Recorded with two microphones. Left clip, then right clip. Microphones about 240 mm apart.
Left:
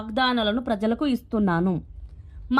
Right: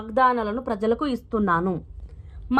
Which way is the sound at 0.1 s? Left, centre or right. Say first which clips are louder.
Right 3 dB; centre.